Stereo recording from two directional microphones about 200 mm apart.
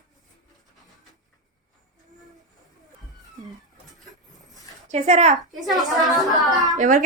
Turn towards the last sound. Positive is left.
turn(degrees=-40)  # may be behind; listen again after turning